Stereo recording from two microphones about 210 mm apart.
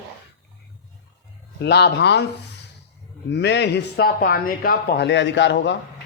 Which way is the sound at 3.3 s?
55° left (ahead or behind).